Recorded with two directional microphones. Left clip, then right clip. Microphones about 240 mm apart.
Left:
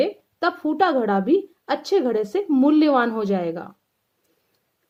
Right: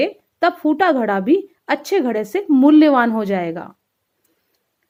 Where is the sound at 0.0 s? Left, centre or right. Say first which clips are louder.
Right 4 dB; right.